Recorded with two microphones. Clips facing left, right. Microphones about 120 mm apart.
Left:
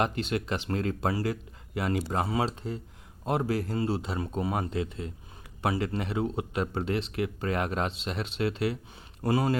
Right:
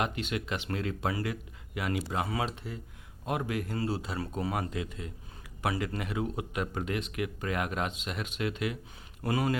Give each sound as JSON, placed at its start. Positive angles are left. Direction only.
{"t": 0.0, "sound": "speech", "side_deg": 35}